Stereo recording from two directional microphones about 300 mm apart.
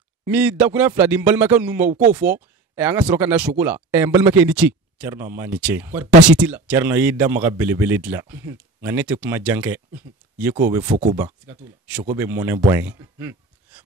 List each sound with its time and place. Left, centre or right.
0.2 s a man's voice: centre
1.9 s speech: right
2.1 s speech: centre